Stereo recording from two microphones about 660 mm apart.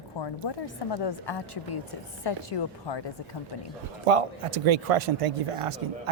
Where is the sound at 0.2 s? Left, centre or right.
Left.